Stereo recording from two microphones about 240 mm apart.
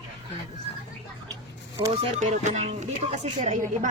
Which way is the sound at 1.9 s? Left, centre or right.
Right.